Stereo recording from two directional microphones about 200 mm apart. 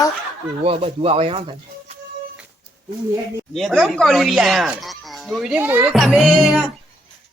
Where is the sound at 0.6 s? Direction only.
30° right (ahead or behind).